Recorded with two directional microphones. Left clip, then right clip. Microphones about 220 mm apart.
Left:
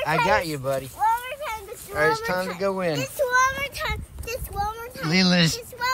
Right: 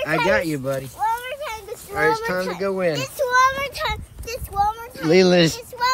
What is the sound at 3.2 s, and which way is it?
Child singing, 30° right (ahead or behind).